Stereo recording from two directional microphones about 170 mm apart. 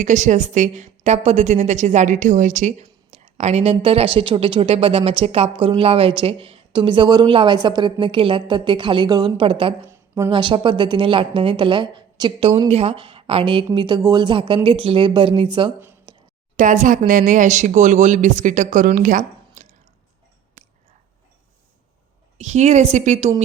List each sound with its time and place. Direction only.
0.0 s a woman's voice: 45° right (ahead or behind); by 9.7 s 30° right (ahead or behind)
9.9 s a sound: 15° right (ahead or behind)
10.3 s speech: 30° right (ahead or behind)
16.1 s a sound: 25° right (ahead or behind)
16.6 s speech: 50° right (ahead or behind)
22.4 s speech: 40° right (ahead or behind)